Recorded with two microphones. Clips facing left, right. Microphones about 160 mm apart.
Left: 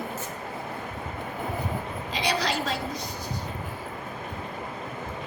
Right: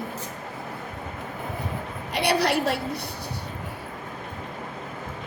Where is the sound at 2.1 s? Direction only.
65° right (ahead or behind).